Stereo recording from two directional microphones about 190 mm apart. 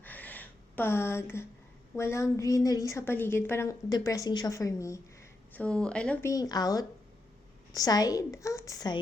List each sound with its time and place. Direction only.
0.0 s a sound: 10° left (ahead or behind)
2.0 s a woman's voice: 15° left (ahead or behind)
5.5 s speech: 5° left (ahead or behind)
6.3 s a woman's voice: 20° left (ahead or behind)